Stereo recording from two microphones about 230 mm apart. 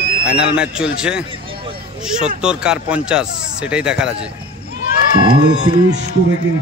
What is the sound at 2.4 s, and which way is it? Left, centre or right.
Speech, centre.